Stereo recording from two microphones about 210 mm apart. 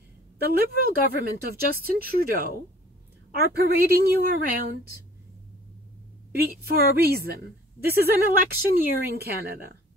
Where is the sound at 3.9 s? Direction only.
45° right (ahead or behind).